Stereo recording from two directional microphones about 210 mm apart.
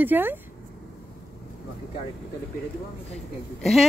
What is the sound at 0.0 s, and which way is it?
Speech, 10° right (ahead or behind).